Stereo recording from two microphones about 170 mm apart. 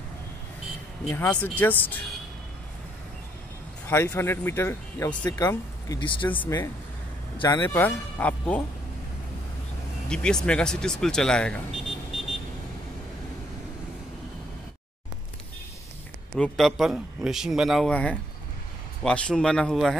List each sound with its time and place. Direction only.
1.0 s speech: 10° left (ahead or behind)
3.8 s speech: 15° left (ahead or behind)
10.0 s speech: 5° left (ahead or behind)
16.3 s speech: 5° left (ahead or behind)